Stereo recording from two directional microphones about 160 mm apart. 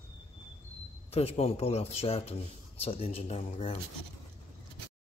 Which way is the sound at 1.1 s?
40° left (ahead or behind).